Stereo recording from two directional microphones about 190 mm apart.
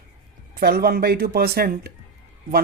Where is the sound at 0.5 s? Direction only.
55° right (ahead or behind).